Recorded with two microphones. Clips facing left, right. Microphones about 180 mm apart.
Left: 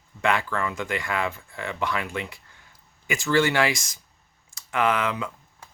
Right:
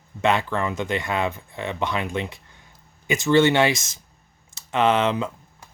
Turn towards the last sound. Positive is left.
turn(degrees=-25)  # may be behind; listen again after turning